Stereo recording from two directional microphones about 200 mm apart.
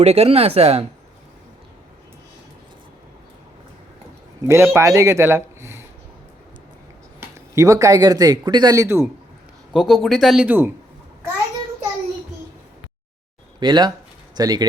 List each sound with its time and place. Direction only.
0.0 s speech: 30° right (ahead or behind)
4.4 s speech: 15° right (ahead or behind)
7.2 s speech: 15° right (ahead or behind)
9.7 s speech: centre (ahead or behind)
13.6 s speech: 20° right (ahead or behind)